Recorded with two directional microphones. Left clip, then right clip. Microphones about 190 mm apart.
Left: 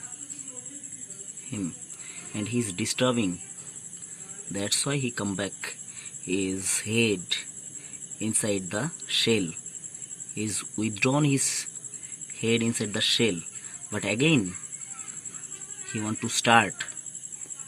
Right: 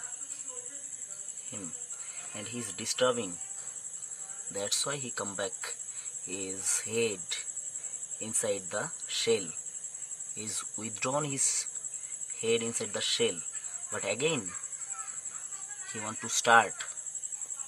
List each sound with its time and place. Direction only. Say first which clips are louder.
1.5 s speech: left 10 dB; centre (ahead or behind)
4.5 s speech: left 4 dB; 5° right (ahead or behind)
15.9 s speech: left 5 dB; 10° right (ahead or behind)